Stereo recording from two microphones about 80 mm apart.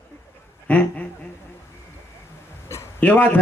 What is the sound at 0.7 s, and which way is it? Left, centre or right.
Speech, left.